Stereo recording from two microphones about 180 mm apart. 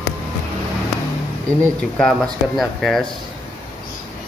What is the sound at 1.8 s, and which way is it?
Speech, centre (ahead or behind).